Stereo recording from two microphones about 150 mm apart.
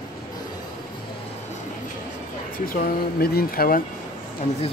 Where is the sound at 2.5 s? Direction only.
70° left (ahead or behind).